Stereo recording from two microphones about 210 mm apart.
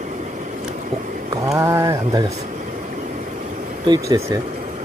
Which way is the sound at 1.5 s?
15° right (ahead or behind).